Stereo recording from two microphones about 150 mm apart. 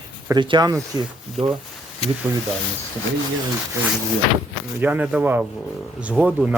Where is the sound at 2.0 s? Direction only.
40° left (ahead or behind).